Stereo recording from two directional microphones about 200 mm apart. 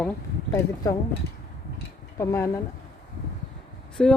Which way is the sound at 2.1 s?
15° left (ahead or behind).